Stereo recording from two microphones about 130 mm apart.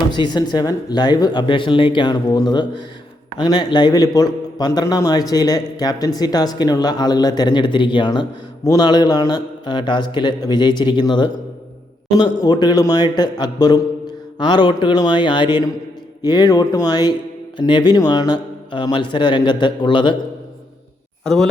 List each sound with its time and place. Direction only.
0.1 s a man's voice: 35° left (ahead or behind)
12.5 s a man's voice: 35° left (ahead or behind)